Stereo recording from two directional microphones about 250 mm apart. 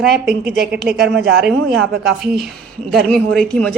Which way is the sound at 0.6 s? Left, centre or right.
Centre.